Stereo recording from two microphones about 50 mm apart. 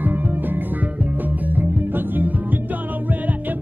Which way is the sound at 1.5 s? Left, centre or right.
Right.